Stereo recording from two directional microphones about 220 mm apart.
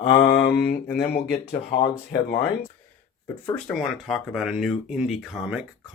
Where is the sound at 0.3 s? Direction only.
45° left (ahead or behind).